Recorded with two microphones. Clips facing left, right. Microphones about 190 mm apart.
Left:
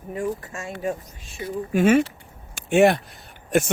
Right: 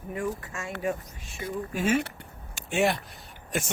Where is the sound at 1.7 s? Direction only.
65° left (ahead or behind).